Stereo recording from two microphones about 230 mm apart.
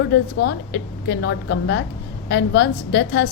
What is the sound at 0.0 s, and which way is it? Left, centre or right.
A woman's voice, left.